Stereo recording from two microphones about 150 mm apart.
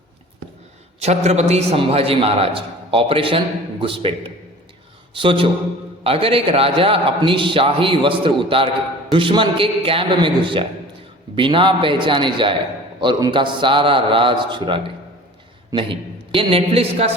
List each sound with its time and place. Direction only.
0.9 s a man's voice: 45° right (ahead or behind)
5.1 s a man's voice: 35° right (ahead or behind)